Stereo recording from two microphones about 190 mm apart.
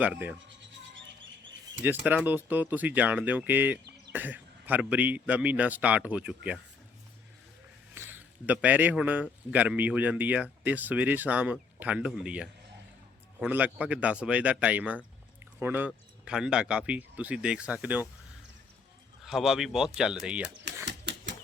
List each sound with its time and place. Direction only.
0.0 s speech: 5° right (ahead or behind)
1.8 s speech: 10° right (ahead or behind)
7.9 s a man's voice: 10° right (ahead or behind)
19.2 s speech: centre (ahead or behind)
20.8 s a sound: 65° right (ahead or behind)